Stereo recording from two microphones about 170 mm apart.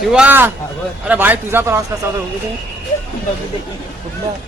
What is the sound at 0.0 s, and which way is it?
Speech, 5° right (ahead or behind).